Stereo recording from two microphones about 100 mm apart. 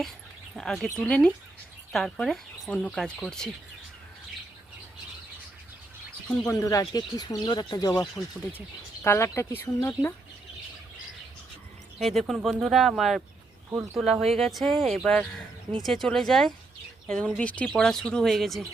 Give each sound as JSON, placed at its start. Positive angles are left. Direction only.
{"t": 0.5, "sound": "speech", "side_deg": 5}
{"t": 6.5, "sound": "speech", "side_deg": 35}
{"t": 9.0, "sound": "speech", "side_deg": 25}
{"t": 11.9, "sound": "speech", "side_deg": 0}
{"t": 13.7, "sound": "speech", "side_deg": -25}
{"t": 13.9, "sound": "speech", "side_deg": 0}